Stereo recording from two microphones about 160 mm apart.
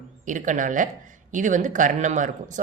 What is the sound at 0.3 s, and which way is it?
A woman's voice, 55° right (ahead or behind).